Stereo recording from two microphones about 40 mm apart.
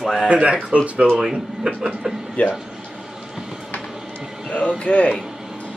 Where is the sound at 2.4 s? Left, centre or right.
Left.